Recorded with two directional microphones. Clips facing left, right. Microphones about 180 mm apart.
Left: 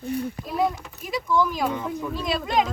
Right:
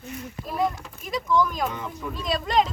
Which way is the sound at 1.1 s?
5° left (ahead or behind).